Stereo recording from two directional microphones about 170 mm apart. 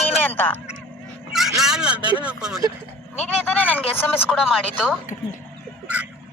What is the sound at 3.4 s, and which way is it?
Speech, 10° left (ahead or behind).